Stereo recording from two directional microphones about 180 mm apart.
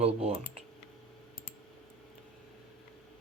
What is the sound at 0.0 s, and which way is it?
Speech, 35° right (ahead or behind).